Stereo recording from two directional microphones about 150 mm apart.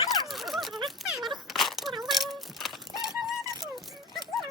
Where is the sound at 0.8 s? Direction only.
Centre (ahead or behind).